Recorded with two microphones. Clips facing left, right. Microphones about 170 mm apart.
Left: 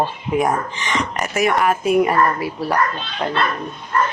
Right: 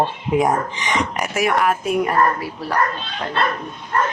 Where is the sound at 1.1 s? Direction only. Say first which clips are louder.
Left 4 dB; 5° right (ahead or behind); by 2.7 s 10° left (ahead or behind).